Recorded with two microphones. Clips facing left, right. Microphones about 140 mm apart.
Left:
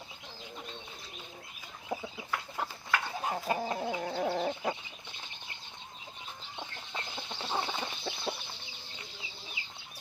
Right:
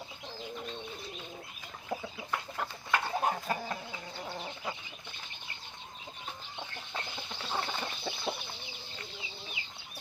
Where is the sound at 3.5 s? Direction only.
20° left (ahead or behind).